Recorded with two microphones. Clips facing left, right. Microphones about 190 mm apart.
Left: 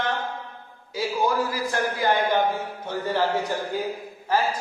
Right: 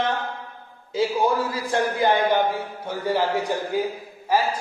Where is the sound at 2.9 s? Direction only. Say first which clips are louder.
Right 1 dB; 10° right (ahead or behind).